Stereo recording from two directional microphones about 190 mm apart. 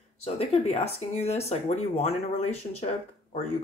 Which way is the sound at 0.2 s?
35° left (ahead or behind).